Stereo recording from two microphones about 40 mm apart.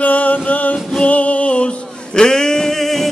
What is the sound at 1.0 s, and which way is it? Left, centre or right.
Music, left.